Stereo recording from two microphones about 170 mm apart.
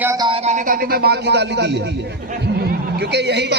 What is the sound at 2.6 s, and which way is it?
Speech, 75° right (ahead or behind).